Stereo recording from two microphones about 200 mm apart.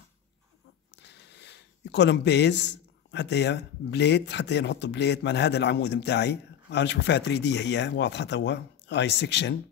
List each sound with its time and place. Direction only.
0.9 s speech: 60° left (ahead or behind)